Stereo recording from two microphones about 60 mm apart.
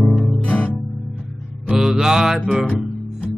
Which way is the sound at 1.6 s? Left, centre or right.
Centre.